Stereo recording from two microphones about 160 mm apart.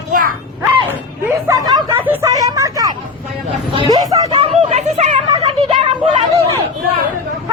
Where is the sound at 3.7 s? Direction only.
25° right (ahead or behind).